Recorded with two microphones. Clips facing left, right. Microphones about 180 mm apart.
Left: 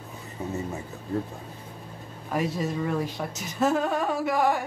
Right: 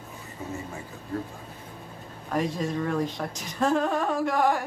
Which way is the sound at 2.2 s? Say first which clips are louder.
Even; 5° left (ahead or behind).